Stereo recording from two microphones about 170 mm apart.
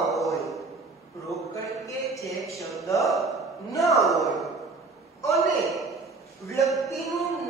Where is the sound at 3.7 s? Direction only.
20° left (ahead or behind).